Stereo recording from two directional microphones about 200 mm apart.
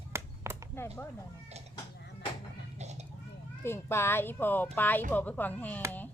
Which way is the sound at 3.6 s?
10° left (ahead or behind).